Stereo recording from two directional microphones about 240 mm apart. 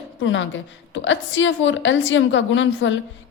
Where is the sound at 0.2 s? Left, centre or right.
Left.